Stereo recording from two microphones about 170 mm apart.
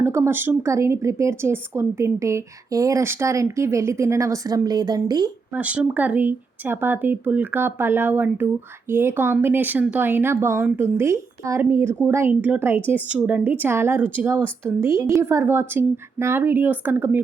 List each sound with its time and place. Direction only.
0.0 s speech: 15° right (ahead or behind)
5.5 s speech: 10° right (ahead or behind)